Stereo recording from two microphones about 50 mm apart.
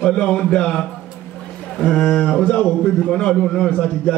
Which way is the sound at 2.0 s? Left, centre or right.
Left.